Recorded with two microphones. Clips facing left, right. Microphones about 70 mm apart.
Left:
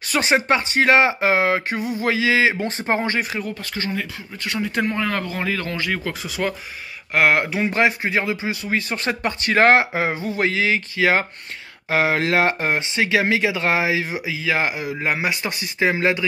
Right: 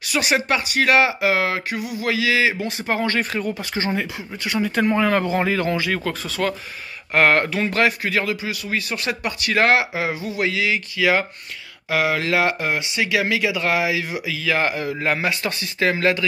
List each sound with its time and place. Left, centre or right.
0.0 s speech: left
3.2 s speech: centre
3.5 s speech: centre
4.4 s speech: centre
4.8 s speech: centre
5.8 s speech: centre